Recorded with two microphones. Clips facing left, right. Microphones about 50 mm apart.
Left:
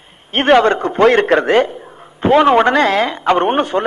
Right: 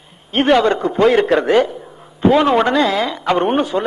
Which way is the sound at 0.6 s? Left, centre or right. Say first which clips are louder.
Left 2 dB; left.